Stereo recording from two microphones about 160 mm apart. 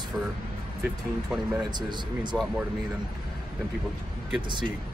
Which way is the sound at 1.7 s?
30° right (ahead or behind).